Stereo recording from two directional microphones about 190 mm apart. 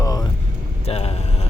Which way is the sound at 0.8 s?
30° left (ahead or behind).